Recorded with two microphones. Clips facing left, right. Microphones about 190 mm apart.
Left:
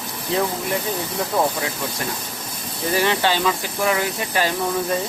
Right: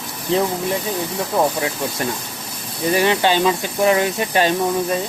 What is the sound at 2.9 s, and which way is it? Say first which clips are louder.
Speech: right 3 dB; 15° right (ahead or behind).